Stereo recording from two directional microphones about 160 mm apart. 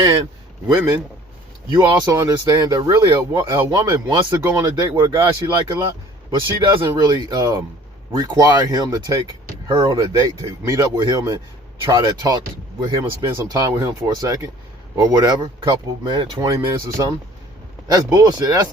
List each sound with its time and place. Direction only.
0.7 s speech: 20° right (ahead or behind)
6.8 s speech: 25° right (ahead or behind)